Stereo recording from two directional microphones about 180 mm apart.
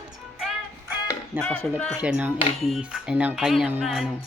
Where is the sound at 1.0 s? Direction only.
10° left (ahead or behind).